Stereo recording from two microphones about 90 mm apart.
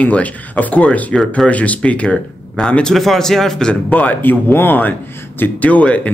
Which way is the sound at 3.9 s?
20° left (ahead or behind).